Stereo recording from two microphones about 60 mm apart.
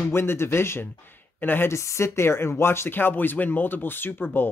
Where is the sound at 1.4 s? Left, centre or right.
Left.